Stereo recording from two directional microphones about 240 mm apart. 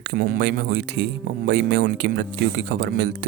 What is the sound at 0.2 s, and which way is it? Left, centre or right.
Speech, right.